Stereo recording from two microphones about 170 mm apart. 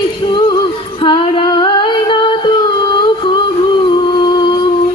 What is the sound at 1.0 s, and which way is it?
Singing, 30° left (ahead or behind).